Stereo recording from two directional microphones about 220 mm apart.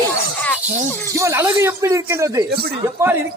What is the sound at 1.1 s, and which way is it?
Speech, 15° right (ahead or behind).